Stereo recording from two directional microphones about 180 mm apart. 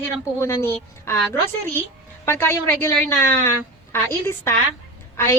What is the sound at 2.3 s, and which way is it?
A woman's voice, 15° left (ahead or behind).